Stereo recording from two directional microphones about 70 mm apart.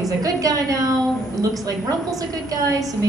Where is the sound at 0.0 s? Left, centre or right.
Right.